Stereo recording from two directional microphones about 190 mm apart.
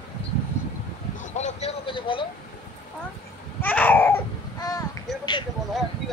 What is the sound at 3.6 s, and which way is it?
Baby cry, 10° left (ahead or behind).